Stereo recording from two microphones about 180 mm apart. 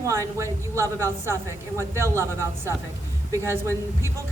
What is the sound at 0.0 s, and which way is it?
A woman's voice, 15° right (ahead or behind).